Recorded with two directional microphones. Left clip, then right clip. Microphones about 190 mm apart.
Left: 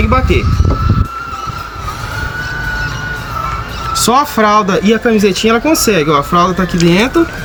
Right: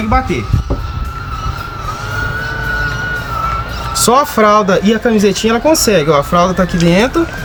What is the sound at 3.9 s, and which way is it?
Turkey, 45° right (ahead or behind).